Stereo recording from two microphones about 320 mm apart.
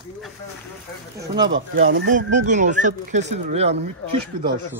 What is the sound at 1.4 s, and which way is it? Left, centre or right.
Speech, right.